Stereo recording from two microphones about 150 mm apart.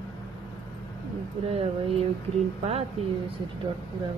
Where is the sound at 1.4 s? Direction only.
45° right (ahead or behind).